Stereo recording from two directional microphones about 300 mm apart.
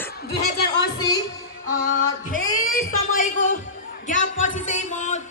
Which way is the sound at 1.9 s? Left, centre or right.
Left.